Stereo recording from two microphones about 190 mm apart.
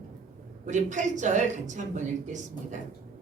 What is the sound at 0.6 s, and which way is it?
A woman's voice, 40° right (ahead or behind).